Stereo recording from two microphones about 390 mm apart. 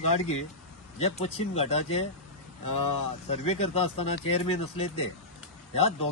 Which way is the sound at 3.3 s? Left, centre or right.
Centre.